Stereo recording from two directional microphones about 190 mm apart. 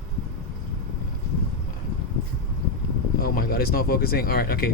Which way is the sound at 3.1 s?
50° left (ahead or behind).